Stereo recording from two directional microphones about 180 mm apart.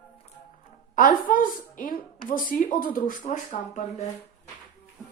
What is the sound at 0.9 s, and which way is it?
Speech, 50° left (ahead or behind).